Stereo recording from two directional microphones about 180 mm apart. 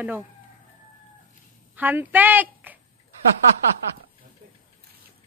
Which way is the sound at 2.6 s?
10° right (ahead or behind).